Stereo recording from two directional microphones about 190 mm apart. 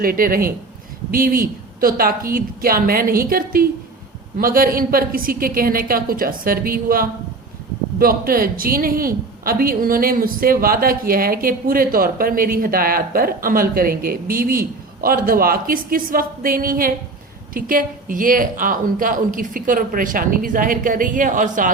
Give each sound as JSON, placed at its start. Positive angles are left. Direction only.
{"t": 0.0, "sound": "a woman's voice", "side_deg": -50}